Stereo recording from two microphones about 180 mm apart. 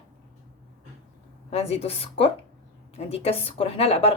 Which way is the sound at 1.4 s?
35° left (ahead or behind).